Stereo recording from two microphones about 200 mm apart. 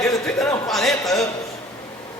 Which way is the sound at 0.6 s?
Centre (ahead or behind).